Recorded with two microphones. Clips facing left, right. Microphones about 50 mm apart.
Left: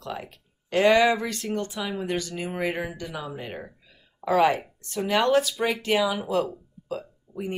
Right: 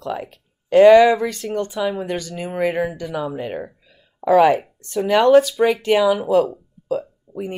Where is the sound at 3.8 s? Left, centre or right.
Centre.